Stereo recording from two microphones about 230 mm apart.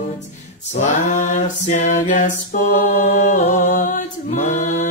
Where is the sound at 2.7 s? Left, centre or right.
Left.